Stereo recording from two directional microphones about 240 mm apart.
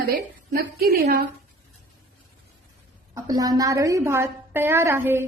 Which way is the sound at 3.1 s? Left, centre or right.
Centre.